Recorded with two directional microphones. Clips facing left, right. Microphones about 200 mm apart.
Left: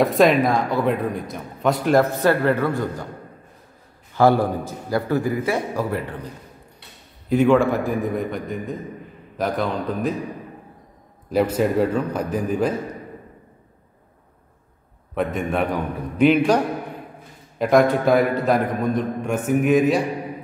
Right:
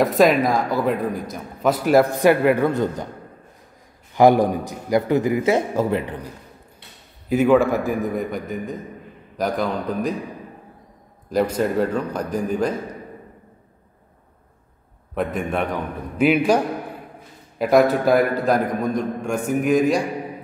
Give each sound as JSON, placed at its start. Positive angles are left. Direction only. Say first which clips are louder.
{"t": 0.0, "sound": "a man's voice", "louder": "even", "side_deg": 0}
{"t": 4.1, "sound": "a man's voice", "louder": "right 2 dB", "side_deg": -15}
{"t": 7.2, "sound": "a man's voice", "louder": "even", "side_deg": -5}
{"t": 11.3, "sound": "a man's voice", "louder": "left 1 dB", "side_deg": 5}
{"t": 15.1, "sound": "a man's voice", "louder": "left 1 dB", "side_deg": 0}
{"t": 16.3, "sound": "a man's voice", "louder": "even", "side_deg": -10}